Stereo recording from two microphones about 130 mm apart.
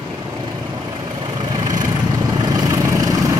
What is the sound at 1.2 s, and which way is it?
Vehicle, 35° right (ahead or behind).